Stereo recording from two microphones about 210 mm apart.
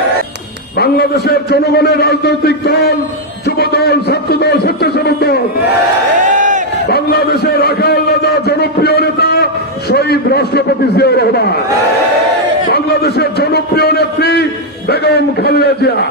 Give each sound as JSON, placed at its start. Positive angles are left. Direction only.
{"t": 0.7, "sound": "a man's voice", "side_deg": 50}
{"t": 6.2, "sound": "crowd", "side_deg": -35}
{"t": 6.9, "sound": "a man's voice", "side_deg": 50}
{"t": 12.6, "sound": "a man's voice", "side_deg": 50}